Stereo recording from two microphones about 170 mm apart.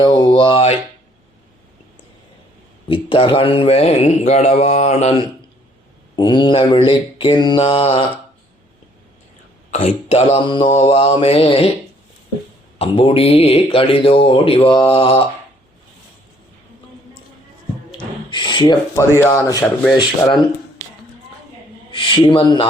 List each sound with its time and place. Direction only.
0.0 s mantra: 30° left (ahead or behind)
2.9 s speech: 30° left (ahead or behind)
6.1 s mantra: 25° left (ahead or behind)
9.7 s speech: 40° left (ahead or behind)
12.8 s speech: 35° left (ahead or behind)
17.9 s gasp: 25° left (ahead or behind)
18.9 s speech: 15° left (ahead or behind)
19.9 s mantra: 25° left (ahead or behind)
21.9 s speech: 30° left (ahead or behind)